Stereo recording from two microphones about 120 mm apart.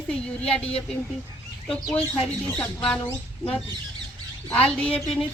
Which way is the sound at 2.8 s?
5° left (ahead or behind).